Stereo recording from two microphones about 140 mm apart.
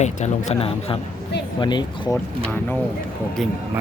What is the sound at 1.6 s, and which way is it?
Speech, 30° left (ahead or behind).